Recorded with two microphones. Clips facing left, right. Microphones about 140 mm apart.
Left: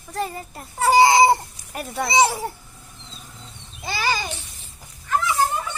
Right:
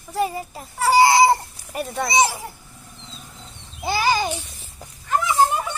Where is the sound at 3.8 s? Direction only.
15° right (ahead or behind).